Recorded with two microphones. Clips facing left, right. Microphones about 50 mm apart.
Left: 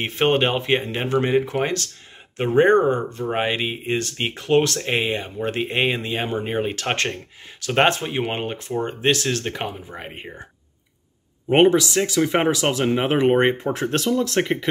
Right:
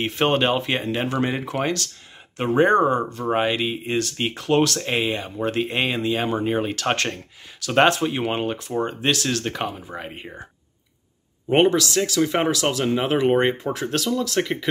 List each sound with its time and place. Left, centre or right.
0.0 s speech: left
11.4 s speech: centre